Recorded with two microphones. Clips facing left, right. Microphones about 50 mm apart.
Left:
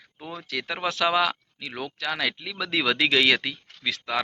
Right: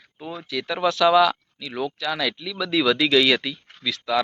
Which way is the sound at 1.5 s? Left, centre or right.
Left.